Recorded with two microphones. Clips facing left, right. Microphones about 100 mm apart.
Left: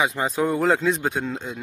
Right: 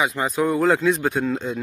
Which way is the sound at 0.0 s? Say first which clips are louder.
Right 1 dB; 25° left (ahead or behind).